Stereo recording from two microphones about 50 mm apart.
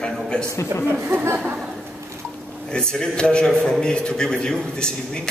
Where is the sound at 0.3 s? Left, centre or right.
Centre.